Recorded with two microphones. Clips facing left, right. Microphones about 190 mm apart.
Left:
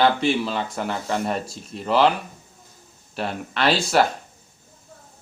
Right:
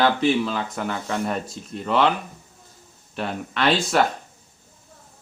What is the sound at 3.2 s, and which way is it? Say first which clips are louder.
Speech: even; centre (ahead or behind).